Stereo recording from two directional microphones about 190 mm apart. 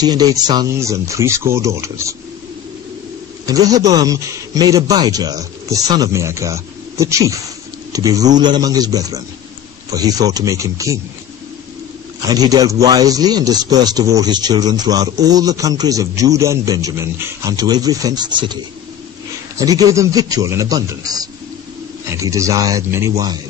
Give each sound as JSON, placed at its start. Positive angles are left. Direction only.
{"t": 0.0, "sound": "speech", "side_deg": -20}
{"t": 3.4, "sound": "speech", "side_deg": -20}
{"t": 12.3, "sound": "speech", "side_deg": -20}
{"t": 19.6, "sound": "speech", "side_deg": -20}